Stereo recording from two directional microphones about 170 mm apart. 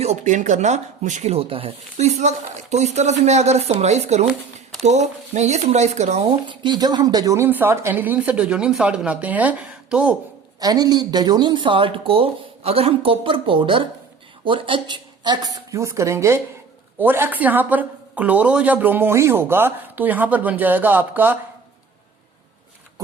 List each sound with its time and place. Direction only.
0.0 s speech: 40° right (ahead or behind)
6.2 s a woman's voice: 30° right (ahead or behind); by 10.2 s 5° right (ahead or behind)
10.6 s a woman's voice: 25° right (ahead or behind)